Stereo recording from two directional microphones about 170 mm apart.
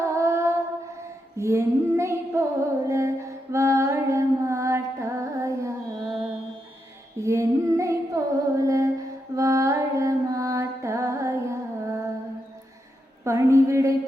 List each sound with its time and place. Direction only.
0.0 s female singing: 20° right (ahead or behind)
7.2 s female singing: 20° right (ahead or behind)
13.2 s a sound: 15° right (ahead or behind)